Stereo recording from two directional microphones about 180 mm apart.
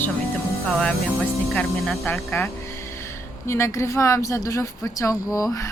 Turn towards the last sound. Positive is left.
turn(degrees=20)  # may be behind; listen again after turning